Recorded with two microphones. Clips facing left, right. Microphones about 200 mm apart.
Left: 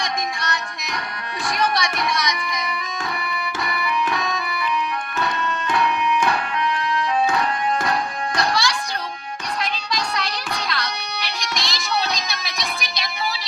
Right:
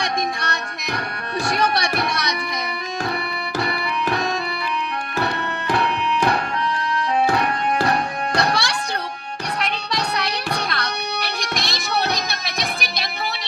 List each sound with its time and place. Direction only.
1.5 s music: 60° right (ahead or behind)
3.6 s music: 30° right (ahead or behind)
5.2 s music: 60° right (ahead or behind)
8.4 s music: 65° right (ahead or behind)